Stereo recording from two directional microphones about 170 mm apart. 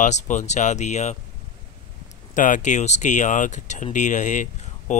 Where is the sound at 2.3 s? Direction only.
50° left (ahead or behind).